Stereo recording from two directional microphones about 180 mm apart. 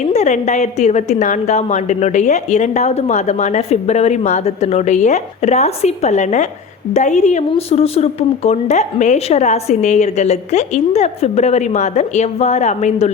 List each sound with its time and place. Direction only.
0.1 s a woman's voice: 40° left (ahead or behind)